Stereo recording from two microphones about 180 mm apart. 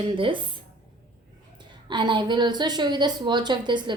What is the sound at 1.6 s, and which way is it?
A woman's voice, 25° right (ahead or behind).